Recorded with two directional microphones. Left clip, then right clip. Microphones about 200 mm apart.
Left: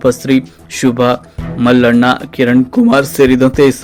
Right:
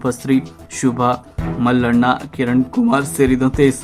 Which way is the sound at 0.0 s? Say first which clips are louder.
Left 7 dB; 10° left (ahead or behind).